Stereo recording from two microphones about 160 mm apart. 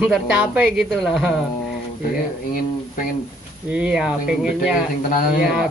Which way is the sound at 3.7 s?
5° right (ahead or behind).